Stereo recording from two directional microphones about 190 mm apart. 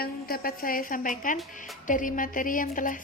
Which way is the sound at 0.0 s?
50° left (ahead or behind).